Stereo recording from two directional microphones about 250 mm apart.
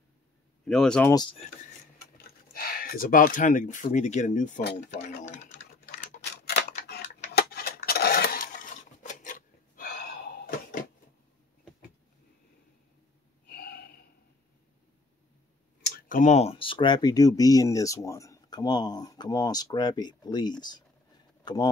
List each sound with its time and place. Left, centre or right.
0.7 s speech: centre
1.1 s speech: centre
2.5 s speech: left
6.2 s a sound: left
13.5 s snort: left
15.8 s speech: left; by 20.8 s centre